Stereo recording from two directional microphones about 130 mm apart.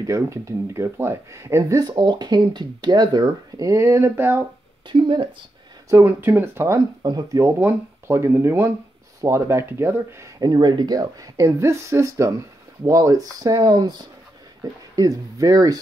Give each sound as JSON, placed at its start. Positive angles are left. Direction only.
{"t": 0.0, "sound": "speech", "side_deg": -25}
{"t": 4.8, "sound": "speech", "side_deg": -40}
{"t": 5.9, "sound": "speech", "side_deg": -20}
{"t": 7.0, "sound": "speech", "side_deg": -30}